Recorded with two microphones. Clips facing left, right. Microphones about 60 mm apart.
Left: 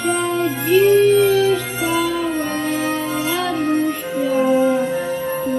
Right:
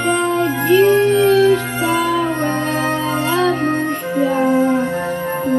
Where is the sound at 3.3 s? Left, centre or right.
Right.